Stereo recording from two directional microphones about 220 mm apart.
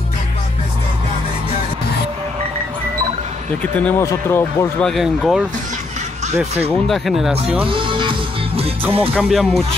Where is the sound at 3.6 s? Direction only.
5° left (ahead or behind).